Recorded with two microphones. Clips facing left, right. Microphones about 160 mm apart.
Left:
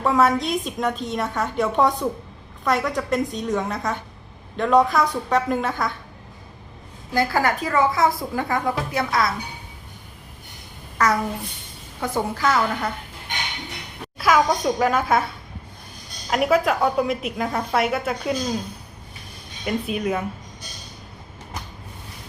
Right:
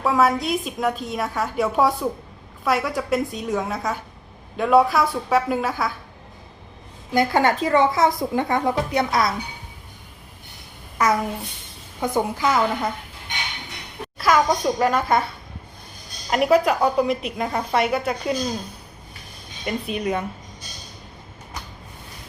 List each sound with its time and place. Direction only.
0.0 s a woman's voice: centre (ahead or behind)
7.1 s a woman's voice: 20° right (ahead or behind)
10.9 s a child's voice: 15° right (ahead or behind)
14.2 s a woman's voice: centre (ahead or behind)
16.3 s a woman's voice: centre (ahead or behind)
19.6 s a woman's voice: centre (ahead or behind)